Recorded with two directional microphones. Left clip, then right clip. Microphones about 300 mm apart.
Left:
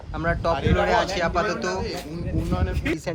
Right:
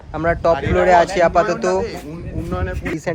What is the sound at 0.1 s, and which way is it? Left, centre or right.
Speech, centre.